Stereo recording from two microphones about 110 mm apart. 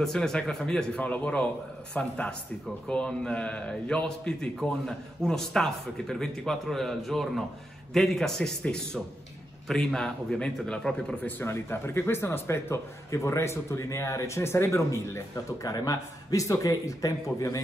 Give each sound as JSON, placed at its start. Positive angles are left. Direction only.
{"t": 0.0, "sound": "a man's voice", "side_deg": 5}